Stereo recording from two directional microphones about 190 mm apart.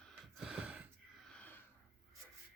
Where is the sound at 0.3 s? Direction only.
5° right (ahead or behind).